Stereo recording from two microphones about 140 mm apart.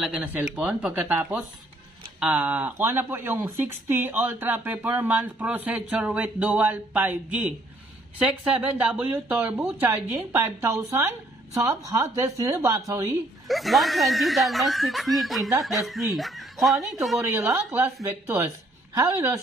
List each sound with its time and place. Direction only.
0.3 s speech: 10° right (ahead or behind)
13.5 s speech: centre (ahead or behind)
17.3 s speech: 20° right (ahead or behind)